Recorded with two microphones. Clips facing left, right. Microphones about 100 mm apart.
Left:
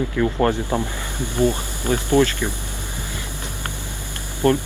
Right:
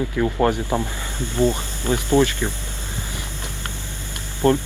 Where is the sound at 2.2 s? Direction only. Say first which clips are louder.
Left 1 dB; 15° right (ahead or behind).